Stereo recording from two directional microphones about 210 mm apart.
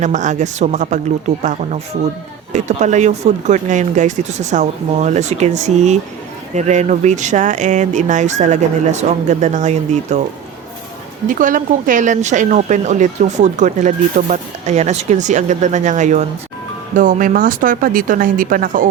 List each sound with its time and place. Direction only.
0.0 s speech: 35° right (ahead or behind)
11.3 s speech: 40° right (ahead or behind)